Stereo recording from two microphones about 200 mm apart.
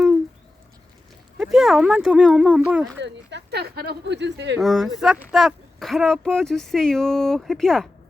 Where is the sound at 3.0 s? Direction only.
60° right (ahead or behind).